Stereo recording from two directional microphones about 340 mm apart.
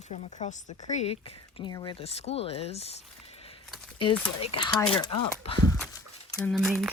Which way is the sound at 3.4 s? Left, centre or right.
Centre.